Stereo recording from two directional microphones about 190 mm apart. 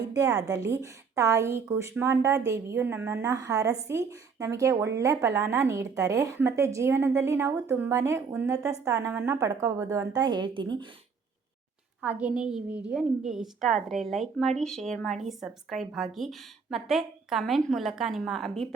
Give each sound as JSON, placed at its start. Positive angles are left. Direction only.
{"t": 0.3, "sound": "a woman's voice", "side_deg": -20}
{"t": 12.0, "sound": "speech", "side_deg": -5}